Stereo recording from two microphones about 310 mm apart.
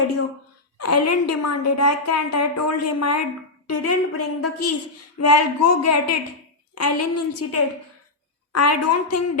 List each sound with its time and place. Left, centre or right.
0.8 s a woman's voice: left